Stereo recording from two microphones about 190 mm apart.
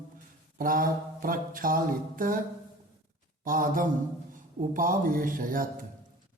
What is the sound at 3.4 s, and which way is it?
Mantra, 45° right (ahead or behind).